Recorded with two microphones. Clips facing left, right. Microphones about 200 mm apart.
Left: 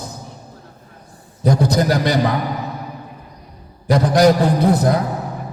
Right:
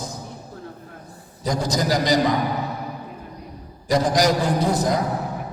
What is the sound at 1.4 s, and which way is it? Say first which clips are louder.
Speech: left 6 dB; 60° left (ahead or behind).